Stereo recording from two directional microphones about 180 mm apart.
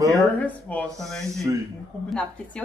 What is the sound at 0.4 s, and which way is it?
A woman's voice, 10° left (ahead or behind).